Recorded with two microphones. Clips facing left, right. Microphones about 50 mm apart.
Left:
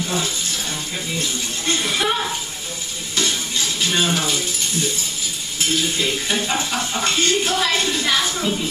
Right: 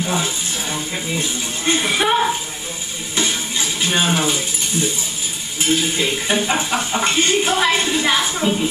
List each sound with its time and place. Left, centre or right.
0.0 s a sound: centre
3.2 s music: centre
5.7 s speech: centre